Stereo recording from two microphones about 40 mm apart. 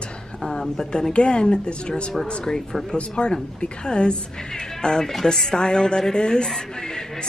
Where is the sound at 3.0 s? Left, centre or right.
Left.